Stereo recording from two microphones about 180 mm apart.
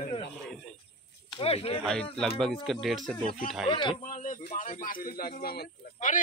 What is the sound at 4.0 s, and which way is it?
A woman's voice, 45° left (ahead or behind).